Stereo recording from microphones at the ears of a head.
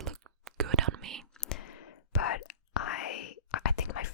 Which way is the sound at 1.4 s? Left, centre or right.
Left.